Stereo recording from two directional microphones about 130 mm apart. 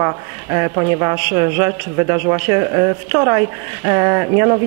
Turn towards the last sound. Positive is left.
turn(degrees=-25)  # may be behind; listen again after turning